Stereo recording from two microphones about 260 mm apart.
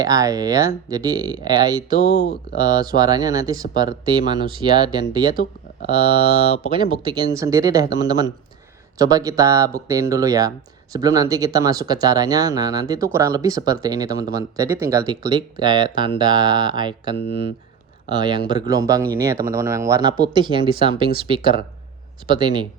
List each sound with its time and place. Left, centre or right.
0.0 s speech: centre
2.0 s speech: left
2.6 s speech: centre
7.0 s speech: centre